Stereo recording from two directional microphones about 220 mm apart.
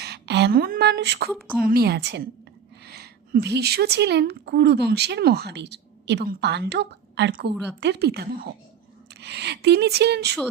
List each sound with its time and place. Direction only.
0.0 s speech: 50° right (ahead or behind)